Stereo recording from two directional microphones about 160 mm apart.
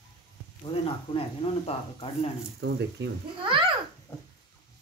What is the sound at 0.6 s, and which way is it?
Speech, 35° left (ahead or behind).